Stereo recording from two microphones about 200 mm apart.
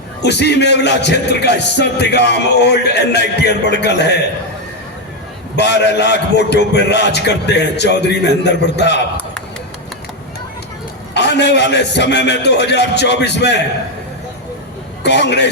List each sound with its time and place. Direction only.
0.2 s a man's voice: 55° left (ahead or behind)
5.5 s a man's voice: 60° left (ahead or behind)
11.1 s a man's voice: 60° left (ahead or behind)
15.0 s a man's voice: 60° left (ahead or behind)